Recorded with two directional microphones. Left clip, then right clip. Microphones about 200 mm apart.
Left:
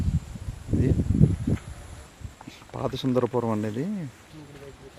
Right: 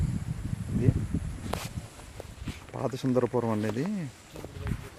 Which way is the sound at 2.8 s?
Centre (ahead or behind).